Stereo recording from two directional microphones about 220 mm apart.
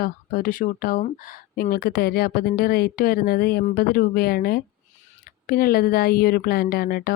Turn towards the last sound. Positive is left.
turn(degrees=45)  # may be behind; listen again after turning